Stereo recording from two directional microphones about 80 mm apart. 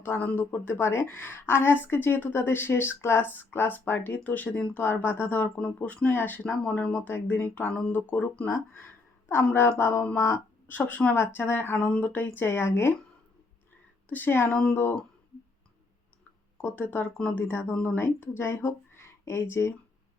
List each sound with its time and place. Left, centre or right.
0.0 s speech: left
7.1 s speech: left
9.3 s a woman's voice: left
10.7 s speech: left
14.1 s speech: left
14.5 s speech: centre
16.6 s speech: centre